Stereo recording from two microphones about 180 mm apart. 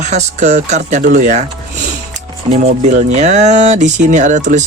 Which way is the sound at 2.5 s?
40° right (ahead or behind).